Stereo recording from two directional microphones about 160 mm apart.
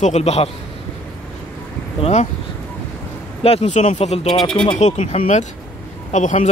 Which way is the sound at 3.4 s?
40° left (ahead or behind).